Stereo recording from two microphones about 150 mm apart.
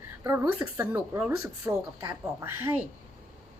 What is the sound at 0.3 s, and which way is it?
A woman's voice, 15° right (ahead or behind).